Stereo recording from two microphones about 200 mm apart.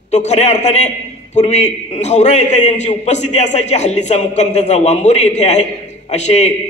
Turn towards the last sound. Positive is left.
turn(degrees=35)  # may be behind; listen again after turning